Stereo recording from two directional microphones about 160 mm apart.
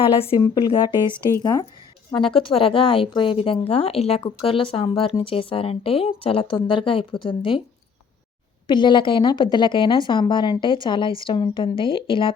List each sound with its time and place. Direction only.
0.2 s a woman's voice: 30° left (ahead or behind)
8.6 s speech: 30° left (ahead or behind)